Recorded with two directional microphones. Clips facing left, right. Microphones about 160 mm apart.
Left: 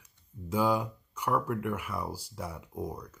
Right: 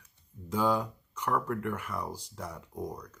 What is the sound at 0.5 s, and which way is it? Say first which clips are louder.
Speech: left 1 dB; 10° left (ahead or behind).